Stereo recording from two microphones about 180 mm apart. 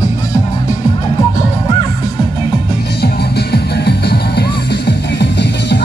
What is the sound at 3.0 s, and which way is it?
Music, 65° left (ahead or behind).